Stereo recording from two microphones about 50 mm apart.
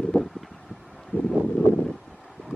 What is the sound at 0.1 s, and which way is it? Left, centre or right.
Wind, centre.